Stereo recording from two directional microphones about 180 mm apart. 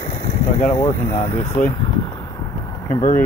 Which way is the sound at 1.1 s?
40° left (ahead or behind).